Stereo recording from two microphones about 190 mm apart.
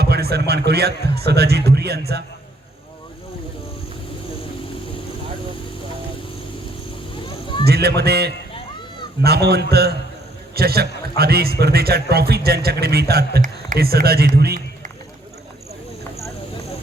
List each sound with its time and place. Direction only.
0.0 s a man's voice: 55° right (ahead or behind)
7.1 s a sound: 25° left (ahead or behind)
7.6 s a man's voice: 60° right (ahead or behind)